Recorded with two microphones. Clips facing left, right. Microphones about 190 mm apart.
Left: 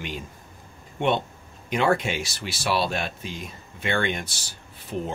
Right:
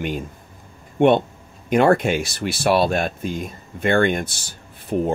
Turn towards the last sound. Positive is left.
turn(degrees=-50)  # may be behind; listen again after turning